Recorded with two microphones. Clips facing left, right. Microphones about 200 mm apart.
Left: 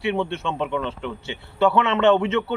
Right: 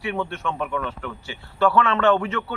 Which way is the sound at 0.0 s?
25° left (ahead or behind).